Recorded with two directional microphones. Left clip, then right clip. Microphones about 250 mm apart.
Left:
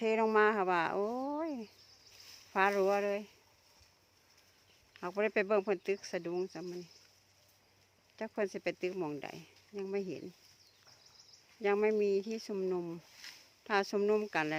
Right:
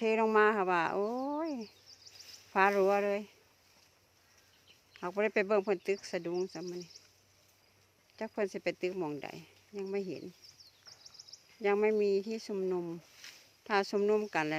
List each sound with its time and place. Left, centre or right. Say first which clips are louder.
0.0 s speech: right 2 dB; centre
4.9 s speech: right 1 dB; centre
8.1 s speech: right 1 dB; centre
11.6 s speech: right 1 dB; centre
13.2 s a sound: left 2 dB; left
13.7 s speech: right 1 dB; centre